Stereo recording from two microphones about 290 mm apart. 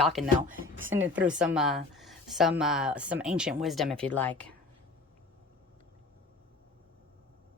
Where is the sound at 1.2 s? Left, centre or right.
Centre.